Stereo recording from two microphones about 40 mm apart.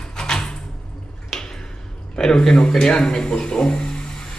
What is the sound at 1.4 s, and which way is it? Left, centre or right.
Speech, centre.